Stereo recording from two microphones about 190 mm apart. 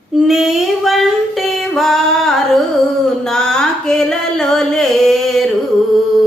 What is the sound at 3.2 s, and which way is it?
Music, 5° left (ahead or behind).